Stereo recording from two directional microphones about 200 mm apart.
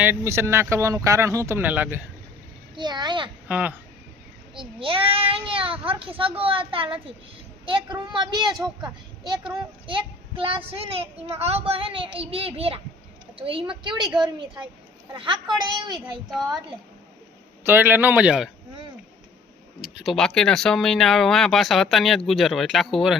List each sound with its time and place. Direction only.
0.0 s speech: 10° right (ahead or behind)
2.7 s a child's voice: 20° right (ahead or behind)
3.5 s speech: 5° right (ahead or behind)
4.5 s a child's voice: 25° right (ahead or behind)
9.8 s a child's voice: 25° right (ahead or behind)
14.1 s speech: 5° right (ahead or behind)
15.1 s a child's voice: 25° right (ahead or behind)
17.6 s speech: 10° right (ahead or behind)
19.8 s speech: centre (ahead or behind)